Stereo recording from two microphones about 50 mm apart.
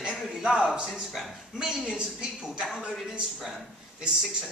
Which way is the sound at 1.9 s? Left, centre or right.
Centre.